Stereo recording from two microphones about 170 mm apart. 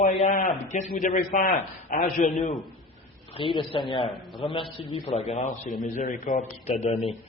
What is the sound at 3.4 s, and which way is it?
A man's voice, 30° left (ahead or behind).